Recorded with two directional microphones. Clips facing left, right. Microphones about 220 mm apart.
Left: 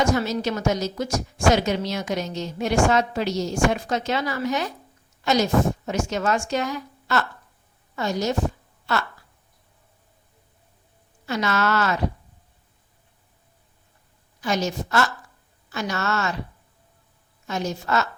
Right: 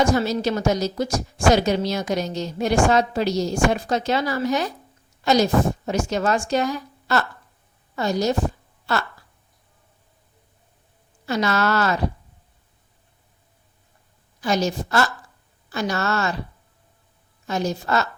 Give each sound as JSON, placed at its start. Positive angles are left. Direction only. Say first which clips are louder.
{"t": 0.0, "sound": "a woman's voice", "louder": "right 2 dB", "side_deg": -35}
{"t": 11.3, "sound": "a woman's voice", "louder": "right 2 dB", "side_deg": -35}
{"t": 14.4, "sound": "a woman's voice", "louder": "right 3 dB", "side_deg": -35}
{"t": 17.4, "sound": "a woman's voice", "louder": "right 3 dB", "side_deg": -35}